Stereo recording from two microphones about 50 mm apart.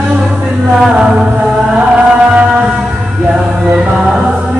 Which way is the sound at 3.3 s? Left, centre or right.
Centre.